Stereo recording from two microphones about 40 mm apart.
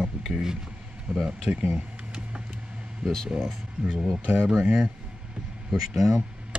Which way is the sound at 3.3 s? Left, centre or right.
Centre.